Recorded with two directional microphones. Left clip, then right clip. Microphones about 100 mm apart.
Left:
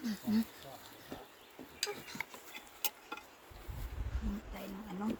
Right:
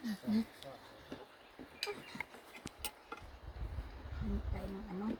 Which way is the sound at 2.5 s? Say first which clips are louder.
Left 5 dB; centre (ahead or behind).